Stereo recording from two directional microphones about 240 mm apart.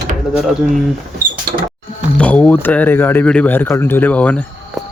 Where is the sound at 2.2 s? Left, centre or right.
Centre.